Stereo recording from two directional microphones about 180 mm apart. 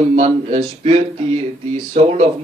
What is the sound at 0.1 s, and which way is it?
Speech, 40° right (ahead or behind).